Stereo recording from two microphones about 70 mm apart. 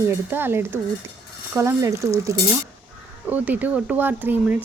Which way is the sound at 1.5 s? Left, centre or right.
Right.